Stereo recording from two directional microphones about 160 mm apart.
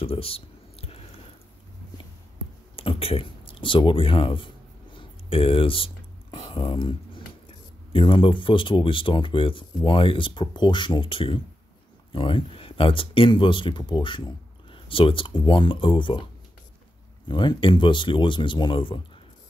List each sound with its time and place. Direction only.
0.0 s typing: 35° left (ahead or behind)
2.7 s speech: 35° left (ahead or behind)
4.9 s a sound: 35° left (ahead or behind)
7.9 s speech: 30° left (ahead or behind)
17.3 s speech: 25° left (ahead or behind)